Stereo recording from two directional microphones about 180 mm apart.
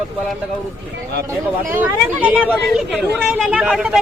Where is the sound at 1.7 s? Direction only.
10° right (ahead or behind).